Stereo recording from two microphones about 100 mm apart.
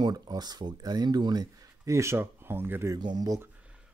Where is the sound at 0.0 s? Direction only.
40° right (ahead or behind); by 2.9 s 20° right (ahead or behind).